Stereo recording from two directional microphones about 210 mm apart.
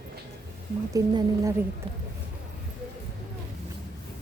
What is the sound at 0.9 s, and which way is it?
Speech, 15° right (ahead or behind).